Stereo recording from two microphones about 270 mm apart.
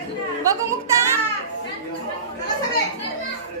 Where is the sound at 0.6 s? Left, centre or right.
Centre.